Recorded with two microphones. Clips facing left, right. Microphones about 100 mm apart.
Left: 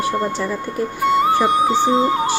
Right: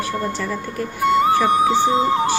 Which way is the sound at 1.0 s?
Centre (ahead or behind).